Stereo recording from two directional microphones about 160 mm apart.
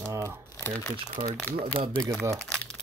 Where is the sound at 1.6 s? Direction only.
35° right (ahead or behind).